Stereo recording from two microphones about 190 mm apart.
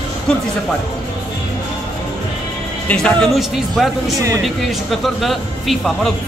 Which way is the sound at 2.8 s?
5° left (ahead or behind).